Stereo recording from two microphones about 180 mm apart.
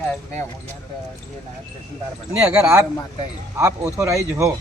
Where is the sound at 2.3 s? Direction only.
15° right (ahead or behind).